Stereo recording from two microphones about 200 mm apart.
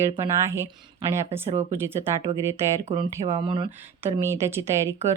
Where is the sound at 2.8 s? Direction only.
30° right (ahead or behind).